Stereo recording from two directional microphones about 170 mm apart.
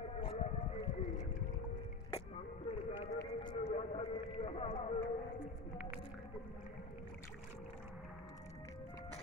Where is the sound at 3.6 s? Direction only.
40° left (ahead or behind).